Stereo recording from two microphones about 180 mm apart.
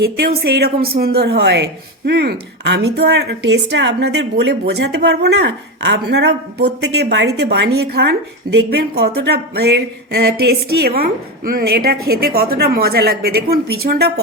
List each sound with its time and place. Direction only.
0.4 s a woman's voice: 60° right (ahead or behind)